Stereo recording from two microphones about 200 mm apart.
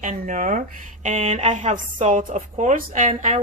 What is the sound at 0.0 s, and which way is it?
A woman's voice, 40° right (ahead or behind).